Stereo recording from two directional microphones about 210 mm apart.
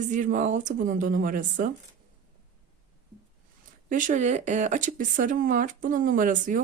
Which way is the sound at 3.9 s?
35° right (ahead or behind).